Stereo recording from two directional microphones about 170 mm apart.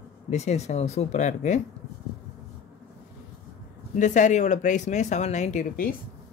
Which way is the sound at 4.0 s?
45° left (ahead or behind).